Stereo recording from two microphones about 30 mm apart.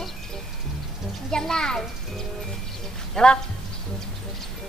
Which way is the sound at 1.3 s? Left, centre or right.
Left.